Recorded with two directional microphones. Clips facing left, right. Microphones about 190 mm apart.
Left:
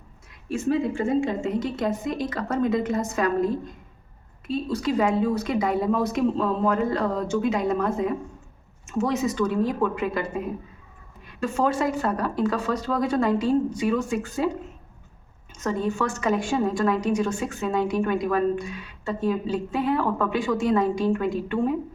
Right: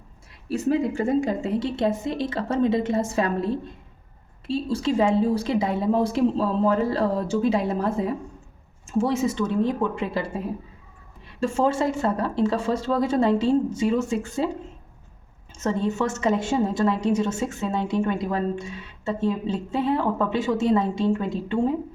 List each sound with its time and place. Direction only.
0.5 s a woman's voice: 40° right (ahead or behind)
15.5 s a woman's voice: 25° right (ahead or behind)